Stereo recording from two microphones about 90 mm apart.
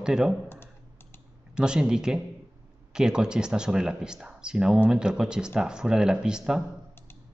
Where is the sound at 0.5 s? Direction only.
25° left (ahead or behind).